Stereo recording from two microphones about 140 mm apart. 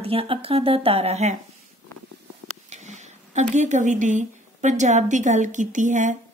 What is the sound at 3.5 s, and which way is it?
A woman's voice, 60° right (ahead or behind).